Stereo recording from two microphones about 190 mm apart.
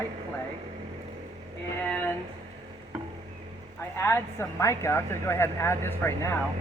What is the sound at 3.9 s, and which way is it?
A woman's voice, 15° left (ahead or behind).